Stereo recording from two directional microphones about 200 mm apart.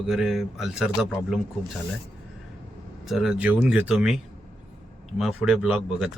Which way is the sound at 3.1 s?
Centre (ahead or behind).